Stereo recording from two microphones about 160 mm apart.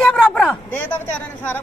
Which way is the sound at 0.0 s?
5° left (ahead or behind).